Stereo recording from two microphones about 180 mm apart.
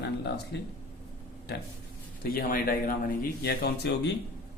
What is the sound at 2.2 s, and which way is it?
A man's voice, 55° left (ahead or behind).